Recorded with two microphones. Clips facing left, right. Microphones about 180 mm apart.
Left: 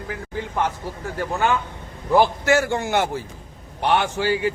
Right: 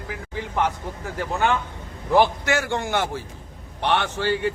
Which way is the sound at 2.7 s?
10° left (ahead or behind).